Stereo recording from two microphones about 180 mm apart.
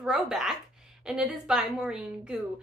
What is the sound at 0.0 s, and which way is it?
A woman's voice, 5° right (ahead or behind).